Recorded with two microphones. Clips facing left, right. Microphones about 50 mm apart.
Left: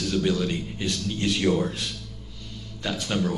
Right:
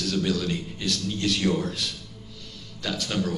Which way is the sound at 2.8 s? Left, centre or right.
Centre.